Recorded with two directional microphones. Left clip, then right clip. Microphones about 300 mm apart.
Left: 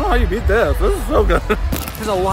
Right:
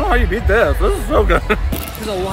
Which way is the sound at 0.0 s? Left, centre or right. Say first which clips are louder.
Right 1 dB; centre.